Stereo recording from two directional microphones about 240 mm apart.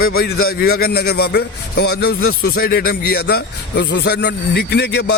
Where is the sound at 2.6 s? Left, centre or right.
Left.